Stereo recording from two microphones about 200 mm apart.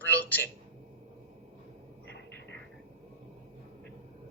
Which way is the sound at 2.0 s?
60° left (ahead or behind).